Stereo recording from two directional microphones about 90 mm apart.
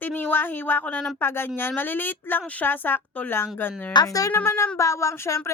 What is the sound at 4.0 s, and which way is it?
Speech, 55° left (ahead or behind).